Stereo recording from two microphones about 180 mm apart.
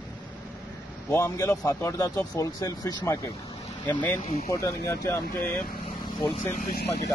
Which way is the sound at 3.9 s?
10° left (ahead or behind).